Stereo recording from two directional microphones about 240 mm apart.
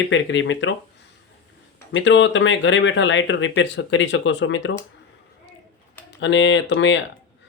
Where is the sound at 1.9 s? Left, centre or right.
Left.